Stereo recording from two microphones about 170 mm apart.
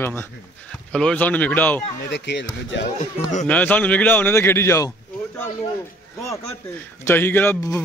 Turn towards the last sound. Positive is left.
turn(degrees=15)  # may be behind; listen again after turning